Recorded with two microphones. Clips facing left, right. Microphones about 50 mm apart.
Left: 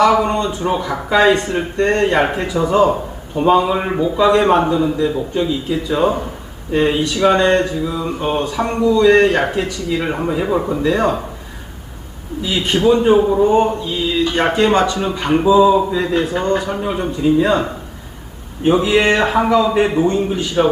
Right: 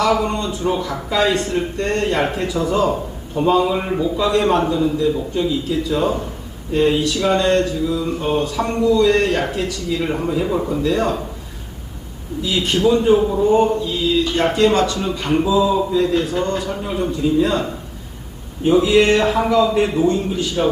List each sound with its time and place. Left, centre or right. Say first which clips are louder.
0.0 s speech: left 4 dB; left
12.5 s speech: left 2 dB; left
18.6 s speech: even; left